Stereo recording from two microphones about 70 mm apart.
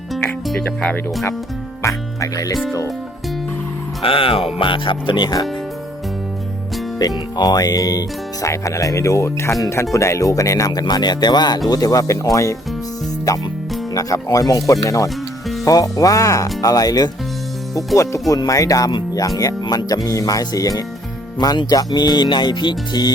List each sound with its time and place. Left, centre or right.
0.6 s speech: centre
1.8 s speech: left
5.1 s speech: left
7.0 s speech: left
10.7 s speech: left
11.7 s speech: left
17.7 s speech: left
19.4 s speech: left
21.3 s speech: left